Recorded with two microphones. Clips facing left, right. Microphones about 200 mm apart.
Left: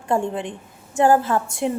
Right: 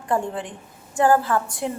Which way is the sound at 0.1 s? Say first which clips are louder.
Left 2 dB; 25° left (ahead or behind).